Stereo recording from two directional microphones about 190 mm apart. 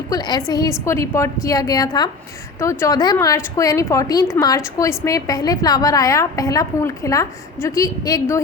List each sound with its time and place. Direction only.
0.1 s a woman's voice: 20° left (ahead or behind)